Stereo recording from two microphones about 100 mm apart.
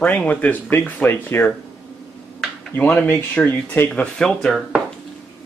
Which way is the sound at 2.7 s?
15° left (ahead or behind).